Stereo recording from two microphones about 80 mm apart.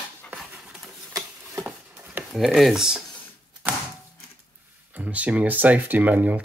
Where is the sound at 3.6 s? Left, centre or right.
Right.